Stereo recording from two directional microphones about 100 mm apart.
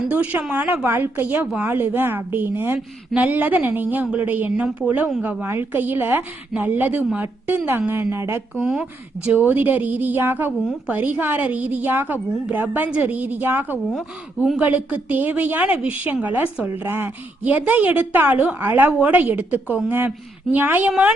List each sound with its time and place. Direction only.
0.1 s a woman's voice: 15° right (ahead or behind)
2.7 s a woman's voice: 5° right (ahead or behind)
3.2 s a woman's voice: 15° right (ahead or behind)
8.6 s a woman's voice: 10° right (ahead or behind)